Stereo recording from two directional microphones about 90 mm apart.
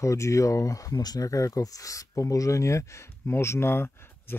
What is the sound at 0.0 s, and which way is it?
Speech, 35° left (ahead or behind).